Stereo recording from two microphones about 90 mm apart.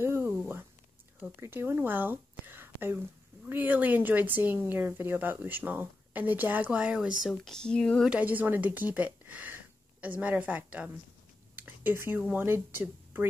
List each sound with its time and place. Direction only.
0.0 s a sound: 25° right (ahead or behind)
1.4 s a woman's voice: 25° right (ahead or behind); by 7.1 s 10° right (ahead or behind)
7.2 s speech: 5° left (ahead or behind)
8.0 s speech: 15° right (ahead or behind)
11.5 s a sound: 20° right (ahead or behind)
12.3 s a woman's voice: 25° right (ahead or behind)